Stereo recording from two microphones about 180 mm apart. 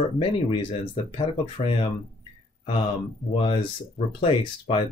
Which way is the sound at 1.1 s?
30° left (ahead or behind).